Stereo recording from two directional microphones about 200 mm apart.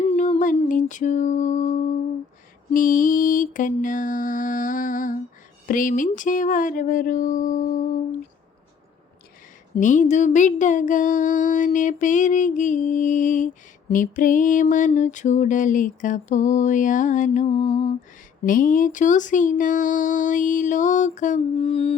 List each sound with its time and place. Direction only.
0.1 s music: 40° left (ahead or behind)
2.7 s speech: 40° left (ahead or behind)
9.7 s speech: 40° left (ahead or behind)
17.5 s lullaby: 25° left (ahead or behind)
18.4 s speech: 40° left (ahead or behind)